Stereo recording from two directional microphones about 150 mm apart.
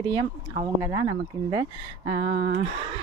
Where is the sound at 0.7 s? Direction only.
20° right (ahead or behind).